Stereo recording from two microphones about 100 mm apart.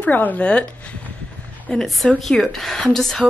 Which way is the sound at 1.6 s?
5° left (ahead or behind).